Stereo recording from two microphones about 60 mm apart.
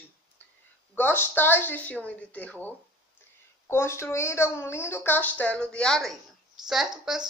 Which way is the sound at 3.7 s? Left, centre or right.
Left.